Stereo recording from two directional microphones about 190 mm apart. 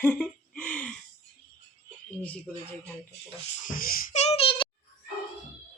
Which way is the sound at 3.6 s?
50° left (ahead or behind).